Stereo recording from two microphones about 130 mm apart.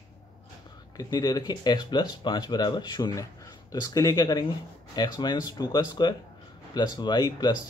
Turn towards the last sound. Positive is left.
turn(degrees=30)  # may be behind; listen again after turning